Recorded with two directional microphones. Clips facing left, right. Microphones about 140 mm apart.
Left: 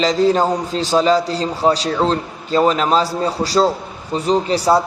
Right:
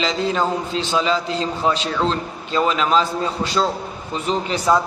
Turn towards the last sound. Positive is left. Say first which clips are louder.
# left 4 dB
turn(degrees=35)  # may be behind; listen again after turning